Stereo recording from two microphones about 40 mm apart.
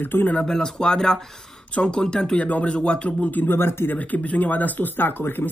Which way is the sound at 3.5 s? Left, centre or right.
Left.